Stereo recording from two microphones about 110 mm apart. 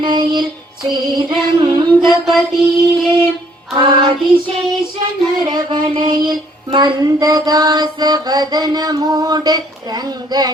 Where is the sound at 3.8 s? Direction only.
50° right (ahead or behind).